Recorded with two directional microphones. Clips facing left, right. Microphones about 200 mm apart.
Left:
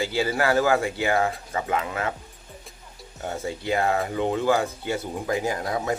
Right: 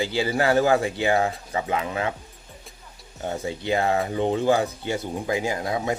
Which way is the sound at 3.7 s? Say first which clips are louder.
Right 1 dB; 30° right (ahead or behind).